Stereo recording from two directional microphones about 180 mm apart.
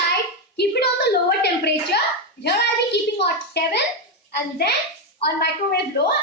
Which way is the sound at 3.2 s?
65° left (ahead or behind).